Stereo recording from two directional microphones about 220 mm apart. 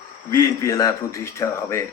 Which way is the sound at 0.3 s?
15° left (ahead or behind).